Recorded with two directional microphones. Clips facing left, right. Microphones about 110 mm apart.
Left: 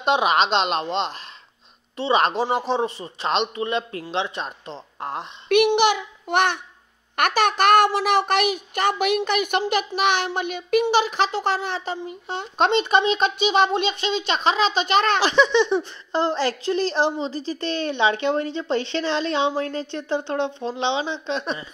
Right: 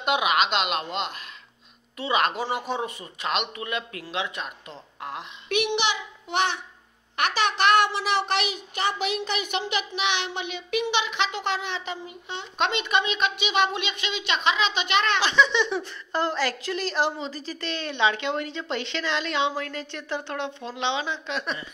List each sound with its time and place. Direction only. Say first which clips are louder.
0.0 s a child's voice: left 4 dB; 30° left (ahead or behind)
5.7 s a child's voice: left 8 dB; 50° left (ahead or behind); by 21.6 s 30° left (ahead or behind)